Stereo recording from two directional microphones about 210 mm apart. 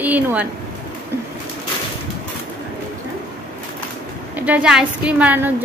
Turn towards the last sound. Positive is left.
turn(degrees=-10)  # may be behind; listen again after turning